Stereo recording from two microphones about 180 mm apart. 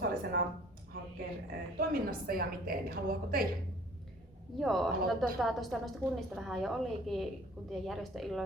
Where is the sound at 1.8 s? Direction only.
55° right (ahead or behind).